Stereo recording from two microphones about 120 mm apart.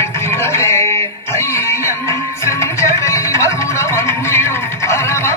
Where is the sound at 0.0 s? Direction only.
20° left (ahead or behind).